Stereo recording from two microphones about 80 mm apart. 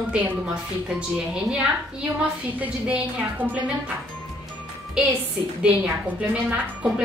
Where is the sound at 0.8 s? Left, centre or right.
Centre.